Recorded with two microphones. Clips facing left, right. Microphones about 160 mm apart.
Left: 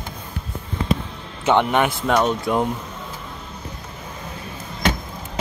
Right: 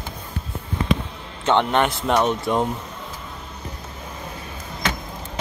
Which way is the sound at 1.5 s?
5° left (ahead or behind).